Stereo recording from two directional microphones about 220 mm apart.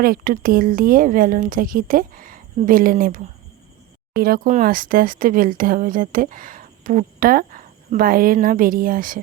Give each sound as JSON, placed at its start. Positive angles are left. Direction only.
{"t": 0.0, "sound": "speech", "side_deg": -40}